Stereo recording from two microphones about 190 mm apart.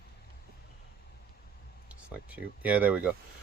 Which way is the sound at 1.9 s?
5° right (ahead or behind).